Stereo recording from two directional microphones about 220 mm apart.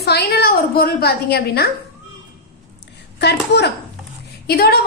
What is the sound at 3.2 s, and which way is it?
A woman's voice, 50° left (ahead or behind).